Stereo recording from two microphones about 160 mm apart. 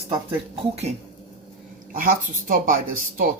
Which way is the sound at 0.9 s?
40° right (ahead or behind).